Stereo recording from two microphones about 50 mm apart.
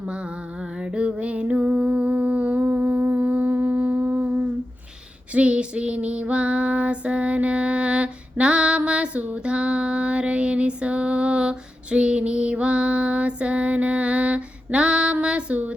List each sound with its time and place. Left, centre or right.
0.0 s music: right
5.3 s female singing: right